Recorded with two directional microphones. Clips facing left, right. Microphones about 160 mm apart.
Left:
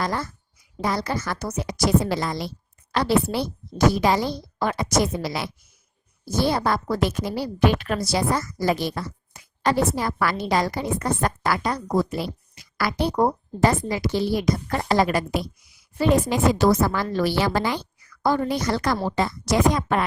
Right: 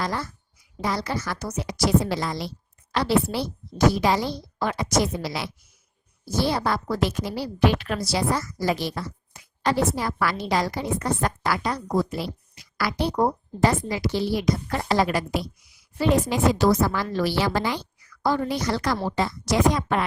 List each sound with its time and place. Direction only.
0.0 s a woman's voice: 50° left (ahead or behind)